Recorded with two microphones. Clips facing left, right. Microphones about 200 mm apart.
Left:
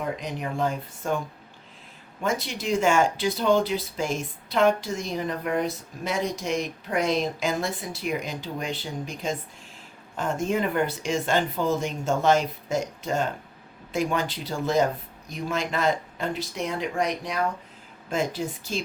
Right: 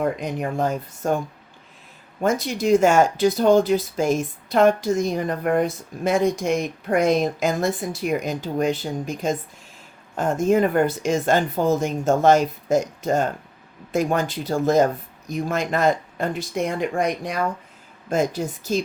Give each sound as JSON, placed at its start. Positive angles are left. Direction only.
{"t": 0.0, "sound": "speech", "side_deg": -45}
{"t": 2.2, "sound": "speech", "side_deg": -45}